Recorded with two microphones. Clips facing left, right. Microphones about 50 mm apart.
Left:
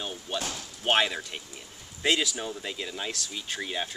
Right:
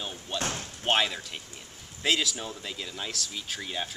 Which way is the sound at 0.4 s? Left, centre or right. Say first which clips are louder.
Right 2 dB; right.